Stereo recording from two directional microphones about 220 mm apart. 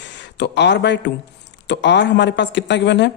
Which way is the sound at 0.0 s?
55° left (ahead or behind).